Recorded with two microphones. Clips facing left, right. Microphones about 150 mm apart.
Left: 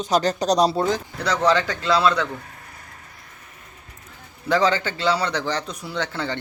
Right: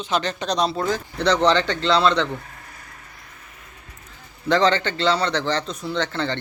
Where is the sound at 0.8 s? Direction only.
20° left (ahead or behind).